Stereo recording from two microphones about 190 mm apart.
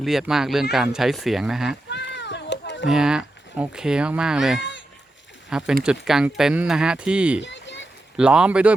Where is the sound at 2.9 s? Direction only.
5° right (ahead or behind).